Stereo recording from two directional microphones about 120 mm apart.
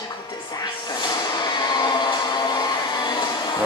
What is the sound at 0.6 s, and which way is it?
Music, 35° left (ahead or behind).